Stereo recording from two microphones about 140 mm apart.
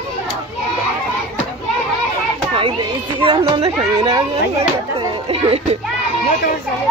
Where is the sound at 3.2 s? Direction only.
40° right (ahead or behind).